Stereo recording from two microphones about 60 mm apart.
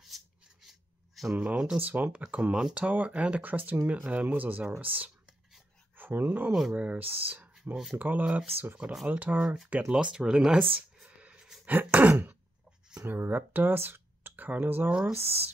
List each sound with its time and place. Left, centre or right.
0.1 s a sound: centre
1.3 s speech: right
7.7 s speech: centre
8.0 s speech: right
9.9 s speech: centre
10.3 s a sound: centre
11.3 s chopping: centre
11.6 s speech: right